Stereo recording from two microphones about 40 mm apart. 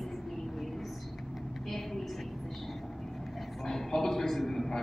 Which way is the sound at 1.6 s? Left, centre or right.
Centre.